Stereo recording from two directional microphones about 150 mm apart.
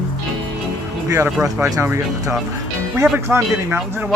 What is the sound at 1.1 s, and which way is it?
Speech, 15° right (ahead or behind).